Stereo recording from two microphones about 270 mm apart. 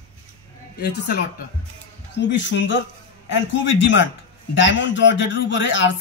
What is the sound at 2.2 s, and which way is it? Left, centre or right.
Speech, left.